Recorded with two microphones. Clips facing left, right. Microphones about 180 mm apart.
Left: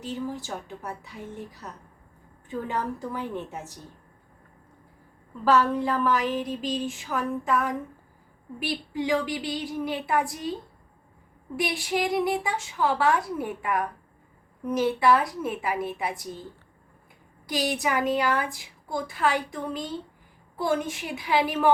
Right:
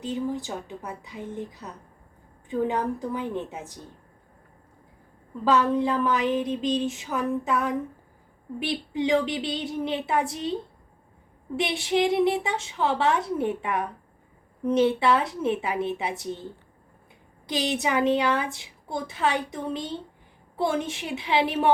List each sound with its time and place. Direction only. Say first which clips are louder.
0.0 s a woman's voice: right 3 dB; 15° right (ahead or behind)
2.5 s a woman's voice: right 4 dB; 15° right (ahead or behind)
5.5 s a woman's voice: even; 20° right (ahead or behind)
11.5 s a woman's voice: right 3 dB; 25° right (ahead or behind)
17.5 s a woman's voice: right 1 dB; 25° right (ahead or behind)